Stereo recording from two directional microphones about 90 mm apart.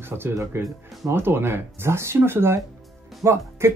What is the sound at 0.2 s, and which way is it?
Speech, 30° right (ahead or behind).